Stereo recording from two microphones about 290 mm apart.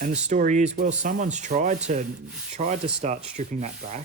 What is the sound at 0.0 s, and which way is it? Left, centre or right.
Speech, right.